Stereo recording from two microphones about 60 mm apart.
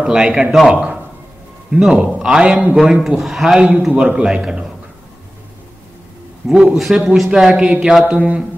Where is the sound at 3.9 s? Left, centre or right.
Right.